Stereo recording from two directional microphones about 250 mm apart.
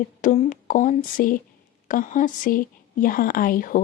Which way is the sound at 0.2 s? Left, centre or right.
Left.